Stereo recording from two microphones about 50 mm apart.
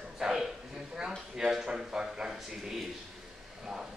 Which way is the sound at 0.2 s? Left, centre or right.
Centre.